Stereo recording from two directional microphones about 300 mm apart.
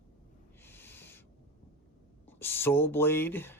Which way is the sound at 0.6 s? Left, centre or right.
Centre.